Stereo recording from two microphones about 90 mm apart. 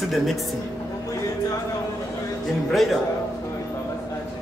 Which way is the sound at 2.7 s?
Centre (ahead or behind).